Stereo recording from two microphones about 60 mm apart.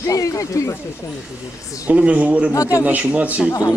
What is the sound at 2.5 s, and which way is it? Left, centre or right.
Speech, left.